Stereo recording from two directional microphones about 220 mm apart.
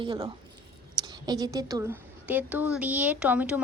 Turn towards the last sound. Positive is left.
turn(degrees=-5)  # may be behind; listen again after turning